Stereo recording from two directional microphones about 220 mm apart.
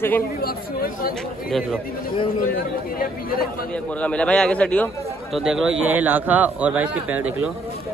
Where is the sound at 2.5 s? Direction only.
40° left (ahead or behind).